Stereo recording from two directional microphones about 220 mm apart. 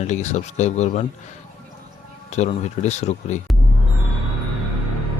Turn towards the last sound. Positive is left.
turn(degrees=30)  # may be behind; listen again after turning